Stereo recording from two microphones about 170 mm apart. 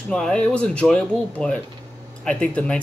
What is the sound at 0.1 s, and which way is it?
Speech, 5° left (ahead or behind).